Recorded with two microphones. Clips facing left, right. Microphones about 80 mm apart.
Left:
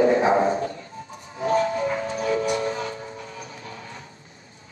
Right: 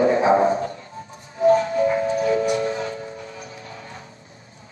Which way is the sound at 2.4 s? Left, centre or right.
Left.